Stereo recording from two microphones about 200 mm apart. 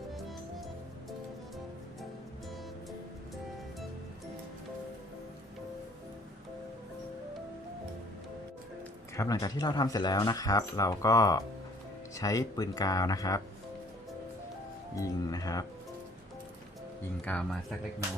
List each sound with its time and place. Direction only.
9.1 s speech: 15° left (ahead or behind)
14.9 s music: 15° left (ahead or behind)
17.2 s speech: 5° left (ahead or behind)